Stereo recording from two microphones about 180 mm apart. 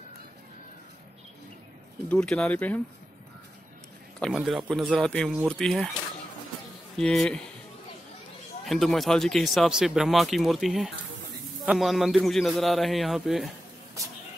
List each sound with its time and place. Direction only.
2.0 s speech: 5° left (ahead or behind)
4.2 s speech: centre (ahead or behind)
7.0 s speech: 5° left (ahead or behind)
8.6 s speech: centre (ahead or behind)
14.0 s a sound: 15° right (ahead or behind)